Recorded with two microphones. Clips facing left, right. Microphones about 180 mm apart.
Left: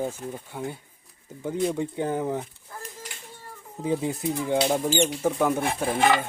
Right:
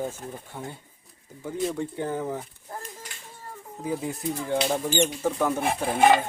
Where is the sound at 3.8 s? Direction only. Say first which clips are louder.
Left 3 dB; 25° left (ahead or behind).